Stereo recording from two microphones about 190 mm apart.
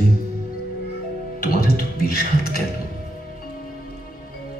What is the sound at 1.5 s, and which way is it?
Speech, 50° left (ahead or behind).